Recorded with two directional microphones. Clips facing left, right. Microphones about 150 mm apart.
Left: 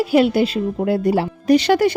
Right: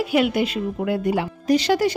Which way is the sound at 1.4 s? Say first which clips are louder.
Left 4 dB; 65° left (ahead or behind).